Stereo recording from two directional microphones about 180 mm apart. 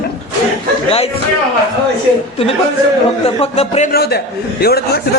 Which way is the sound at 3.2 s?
35° left (ahead or behind).